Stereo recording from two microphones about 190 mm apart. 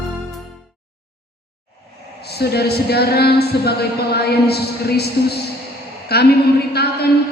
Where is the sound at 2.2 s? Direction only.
60° left (ahead or behind).